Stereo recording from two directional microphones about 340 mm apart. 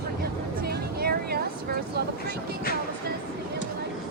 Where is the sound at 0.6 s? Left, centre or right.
Right.